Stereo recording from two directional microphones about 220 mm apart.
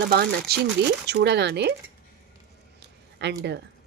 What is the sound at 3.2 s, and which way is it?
Speech, 50° right (ahead or behind).